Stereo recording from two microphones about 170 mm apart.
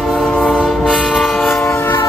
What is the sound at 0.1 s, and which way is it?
Train, 5° left (ahead or behind).